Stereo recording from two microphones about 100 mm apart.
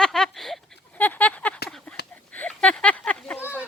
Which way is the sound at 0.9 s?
15° left (ahead or behind).